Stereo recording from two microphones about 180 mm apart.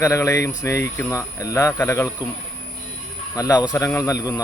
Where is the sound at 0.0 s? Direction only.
15° left (ahead or behind).